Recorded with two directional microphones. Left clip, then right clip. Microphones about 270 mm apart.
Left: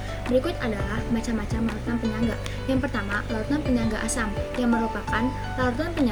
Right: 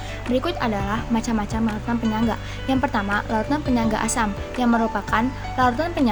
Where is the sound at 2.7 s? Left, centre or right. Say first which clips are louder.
Right 5 dB; right.